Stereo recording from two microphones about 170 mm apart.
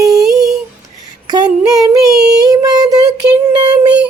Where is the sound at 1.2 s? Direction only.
25° right (ahead or behind).